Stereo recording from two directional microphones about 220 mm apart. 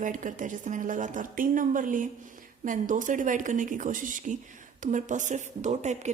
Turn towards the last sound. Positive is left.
turn(degrees=-30)  # may be behind; listen again after turning